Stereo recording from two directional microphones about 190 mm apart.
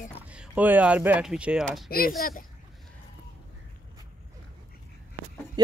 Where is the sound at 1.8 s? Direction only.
50° left (ahead or behind).